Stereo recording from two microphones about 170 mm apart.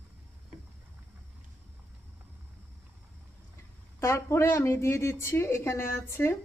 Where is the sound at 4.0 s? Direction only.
15° left (ahead or behind).